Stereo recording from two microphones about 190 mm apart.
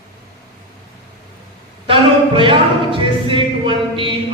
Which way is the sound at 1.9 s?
25° right (ahead or behind).